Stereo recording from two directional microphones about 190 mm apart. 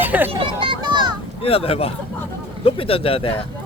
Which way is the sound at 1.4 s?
30° left (ahead or behind).